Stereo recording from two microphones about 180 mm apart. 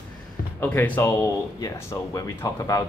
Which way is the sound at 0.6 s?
10° left (ahead or behind).